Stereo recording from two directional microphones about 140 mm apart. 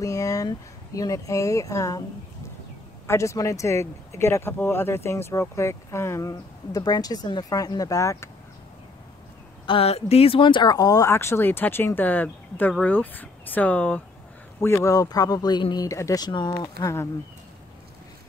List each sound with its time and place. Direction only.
0.0 s speech: 25° left (ahead or behind)
3.1 s speech: 20° left (ahead or behind)
9.7 s speech: 45° left (ahead or behind)
16.8 s speech: 20° left (ahead or behind)